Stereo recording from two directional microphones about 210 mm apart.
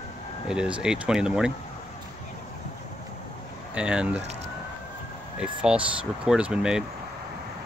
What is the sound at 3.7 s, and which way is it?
Speech, 5° right (ahead or behind).